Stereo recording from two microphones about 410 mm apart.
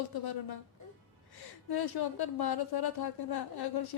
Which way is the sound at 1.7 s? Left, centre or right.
Left.